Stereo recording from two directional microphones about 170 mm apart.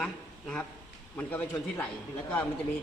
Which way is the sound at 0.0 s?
5° left (ahead or behind).